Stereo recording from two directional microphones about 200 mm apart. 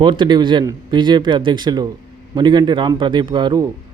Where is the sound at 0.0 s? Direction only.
25° right (ahead or behind).